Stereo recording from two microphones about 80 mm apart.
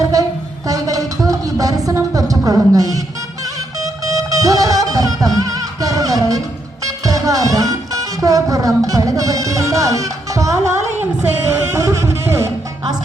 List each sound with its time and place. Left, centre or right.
0.7 s a sound: right
4.0 s music: right
11.2 s music: right
11.8 s music: right